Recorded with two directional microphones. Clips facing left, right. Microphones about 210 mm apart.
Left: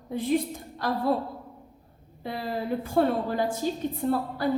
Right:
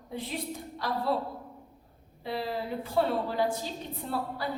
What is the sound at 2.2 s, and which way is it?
A woman's voice, 50° left (ahead or behind).